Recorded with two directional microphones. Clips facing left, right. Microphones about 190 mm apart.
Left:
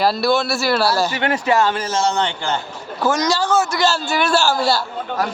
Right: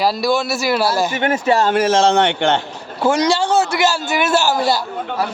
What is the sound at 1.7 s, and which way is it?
Speech, 90° right.